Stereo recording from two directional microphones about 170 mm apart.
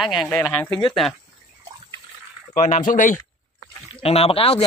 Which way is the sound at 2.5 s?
45° left (ahead or behind).